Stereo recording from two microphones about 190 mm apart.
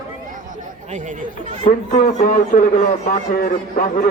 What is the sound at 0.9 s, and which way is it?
Speech, 40° right (ahead or behind).